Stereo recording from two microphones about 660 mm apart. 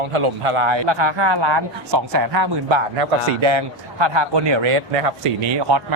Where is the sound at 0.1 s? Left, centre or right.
Right.